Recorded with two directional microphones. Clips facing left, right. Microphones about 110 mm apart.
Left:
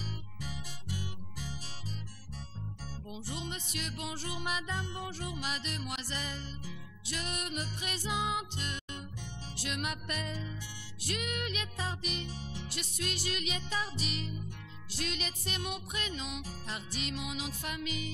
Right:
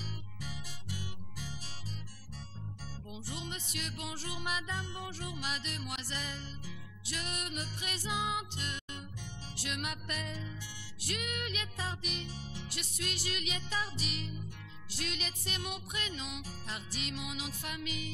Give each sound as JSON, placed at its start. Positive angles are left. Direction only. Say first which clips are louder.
{"t": 3.1, "sound": "music", "louder": "left 2 dB", "side_deg": 30}
{"t": 15.0, "sound": "music", "louder": "left 2 dB", "side_deg": 35}